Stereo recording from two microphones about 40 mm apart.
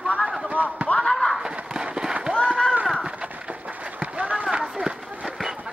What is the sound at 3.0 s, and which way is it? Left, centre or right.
Horse, right.